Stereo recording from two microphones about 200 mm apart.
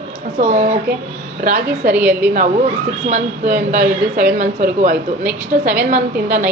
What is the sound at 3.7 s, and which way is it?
A woman's voice, 45° right (ahead or behind).